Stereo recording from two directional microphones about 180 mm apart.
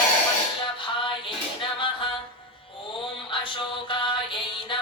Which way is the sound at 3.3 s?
30° left (ahead or behind).